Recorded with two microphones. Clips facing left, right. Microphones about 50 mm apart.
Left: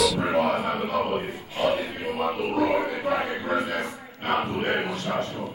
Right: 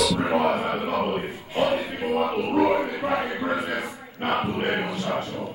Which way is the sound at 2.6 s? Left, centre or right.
Centre.